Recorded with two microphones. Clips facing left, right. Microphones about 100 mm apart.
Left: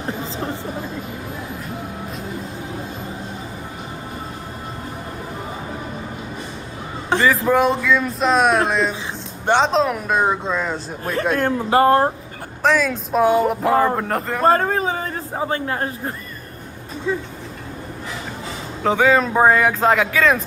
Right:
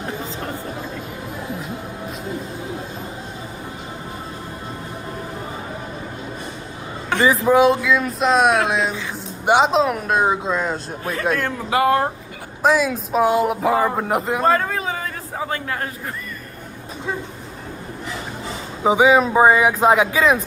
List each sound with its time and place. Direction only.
7.1 s a sound: 30° left (ahead or behind)
7.4 s speech: centre (ahead or behind)
11.3 s a man's voice: 40° left (ahead or behind)
12.6 s speech: 5° right (ahead or behind)
14.4 s a sound: 40° left (ahead or behind)
18.8 s speech: 15° right (ahead or behind)